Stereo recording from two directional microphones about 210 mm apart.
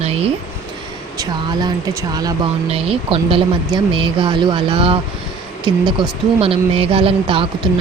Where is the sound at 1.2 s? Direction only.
20° right (ahead or behind).